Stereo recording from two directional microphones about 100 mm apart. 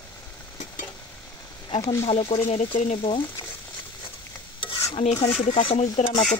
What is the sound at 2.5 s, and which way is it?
Speech, 65° left (ahead or behind).